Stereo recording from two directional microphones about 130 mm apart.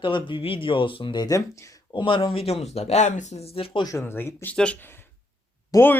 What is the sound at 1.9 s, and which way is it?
Speech, 40° left (ahead or behind).